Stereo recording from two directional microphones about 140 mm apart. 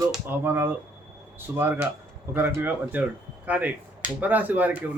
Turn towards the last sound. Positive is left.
turn(degrees=-10)  # may be behind; listen again after turning